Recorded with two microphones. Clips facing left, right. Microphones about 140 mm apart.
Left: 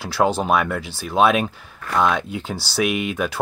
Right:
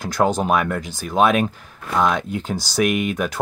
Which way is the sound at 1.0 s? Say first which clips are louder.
Even; centre (ahead or behind).